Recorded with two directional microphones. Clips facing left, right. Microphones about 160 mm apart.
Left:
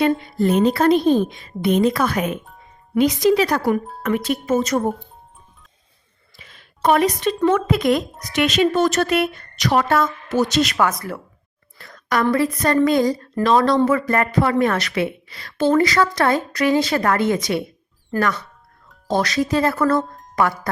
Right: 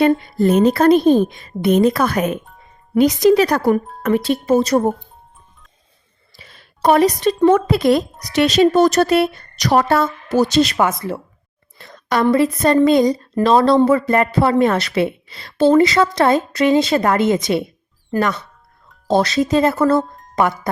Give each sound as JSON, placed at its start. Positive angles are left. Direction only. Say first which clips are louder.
{"t": 0.0, "sound": "a woman's voice", "louder": "right 4 dB", "side_deg": -40}
{"t": 4.0, "sound": "speech", "louder": "right 5 dB", "side_deg": -35}
{"t": 6.3, "sound": "a sound", "louder": "right 2 dB", "side_deg": -35}
{"t": 7.4, "sound": "a woman's voice", "louder": "right 4 dB", "side_deg": -35}
{"t": 20.0, "sound": "music", "louder": "right 3 dB", "side_deg": 0}
{"t": 20.3, "sound": "speech", "louder": "right 2 dB", "side_deg": -20}